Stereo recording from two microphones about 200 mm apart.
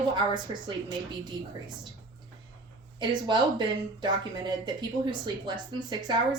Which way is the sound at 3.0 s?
20° right (ahead or behind).